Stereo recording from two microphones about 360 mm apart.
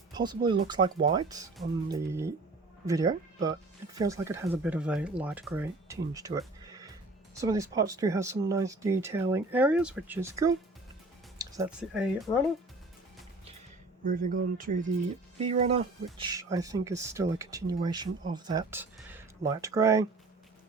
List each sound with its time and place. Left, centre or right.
0.1 s speech: centre
12.3 s speech: centre
14.0 s speech: right